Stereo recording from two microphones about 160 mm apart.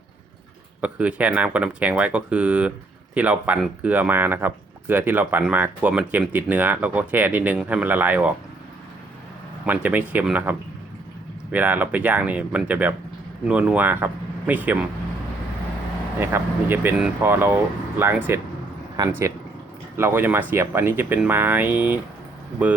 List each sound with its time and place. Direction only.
0.8 s speech: 10° right (ahead or behind)
9.6 s speech: 10° right (ahead or behind)
16.2 s speech: 15° right (ahead or behind)
19.0 s speech: 25° right (ahead or behind)
20.0 s speech: 15° right (ahead or behind)